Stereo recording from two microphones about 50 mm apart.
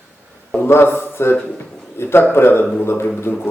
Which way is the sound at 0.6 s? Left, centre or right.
Left.